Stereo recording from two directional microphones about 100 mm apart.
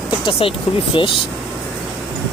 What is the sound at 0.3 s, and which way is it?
Speech, 65° left (ahead or behind).